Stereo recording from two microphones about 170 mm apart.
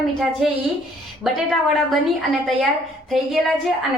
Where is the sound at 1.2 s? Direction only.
Centre (ahead or behind).